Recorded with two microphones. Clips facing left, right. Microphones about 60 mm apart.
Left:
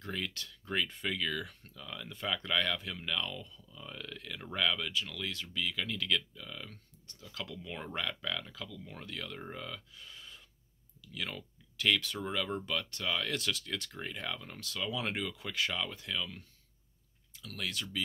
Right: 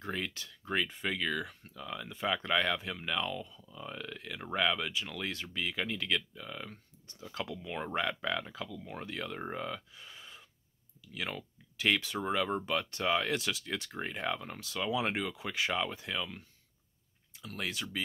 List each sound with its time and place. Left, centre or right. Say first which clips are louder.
0.0 s speech: right 2 dB; centre
7.5 s speech: right 5 dB; centre
17.4 s speech: right 1 dB; right